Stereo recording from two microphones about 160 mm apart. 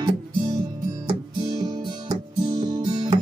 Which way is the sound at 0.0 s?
25° right (ahead or behind).